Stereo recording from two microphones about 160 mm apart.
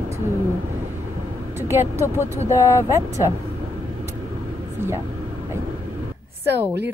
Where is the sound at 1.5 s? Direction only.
15° right (ahead or behind).